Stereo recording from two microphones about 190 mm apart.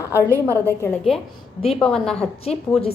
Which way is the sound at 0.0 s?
15° left (ahead or behind).